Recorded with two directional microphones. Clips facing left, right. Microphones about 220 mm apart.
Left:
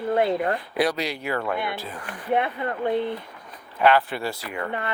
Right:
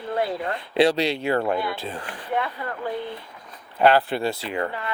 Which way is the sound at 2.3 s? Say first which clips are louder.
Left 4 dB; 25° left (ahead or behind).